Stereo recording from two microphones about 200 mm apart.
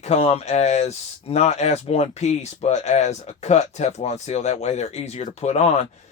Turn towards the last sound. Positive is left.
turn(degrees=35)  # may be behind; listen again after turning